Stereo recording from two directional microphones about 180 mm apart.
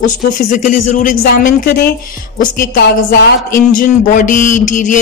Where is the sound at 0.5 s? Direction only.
45° left (ahead or behind).